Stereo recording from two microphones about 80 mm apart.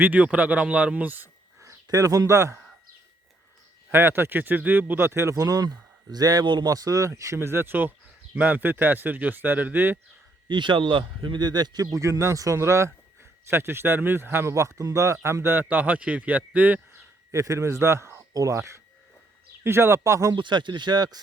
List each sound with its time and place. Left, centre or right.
0.0 s speech: centre
1.6 s speech: right
3.9 s speech: right
6.4 s speech: right
6.7 s speech: right
7.3 s speech: right
10.5 s speech: right; by 16.8 s centre
17.3 s a man's voice: right
20.3 s speech: right